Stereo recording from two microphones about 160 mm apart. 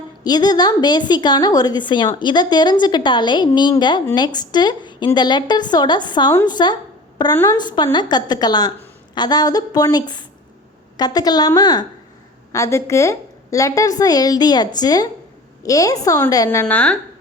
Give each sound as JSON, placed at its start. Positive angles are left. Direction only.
{"t": 0.3, "sound": "a woman's voice", "side_deg": 25}